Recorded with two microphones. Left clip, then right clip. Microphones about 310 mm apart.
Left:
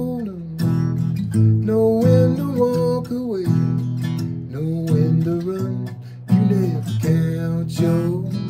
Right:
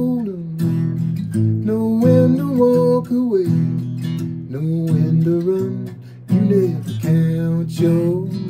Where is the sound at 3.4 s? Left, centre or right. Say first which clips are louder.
Right 1 dB; centre.